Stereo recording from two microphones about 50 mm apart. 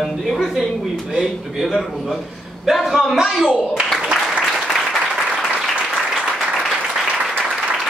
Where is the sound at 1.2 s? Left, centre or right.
Centre.